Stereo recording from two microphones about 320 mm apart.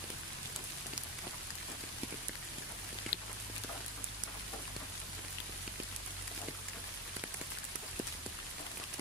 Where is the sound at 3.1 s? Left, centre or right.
Left.